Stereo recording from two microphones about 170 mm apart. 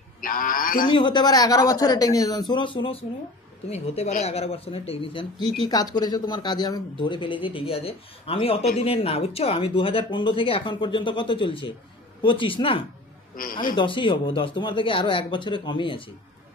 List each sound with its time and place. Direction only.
0.2 s speech: 55° left (ahead or behind)
0.8 s speech: 30° left (ahead or behind)
5.6 s speech: 20° left (ahead or behind)
13.4 s speech: 55° left (ahead or behind)
13.7 s speech: 30° left (ahead or behind)